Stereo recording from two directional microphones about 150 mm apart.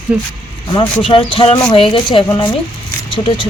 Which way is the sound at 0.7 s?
35° left (ahead or behind).